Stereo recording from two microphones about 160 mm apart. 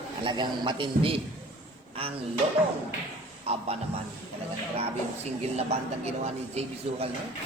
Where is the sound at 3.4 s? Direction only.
40° right (ahead or behind).